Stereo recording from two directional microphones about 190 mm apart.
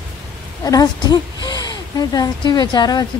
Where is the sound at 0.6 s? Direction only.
20° left (ahead or behind).